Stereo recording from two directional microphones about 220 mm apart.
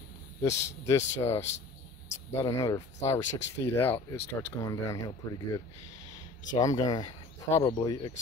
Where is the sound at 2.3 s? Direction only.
15° left (ahead or behind).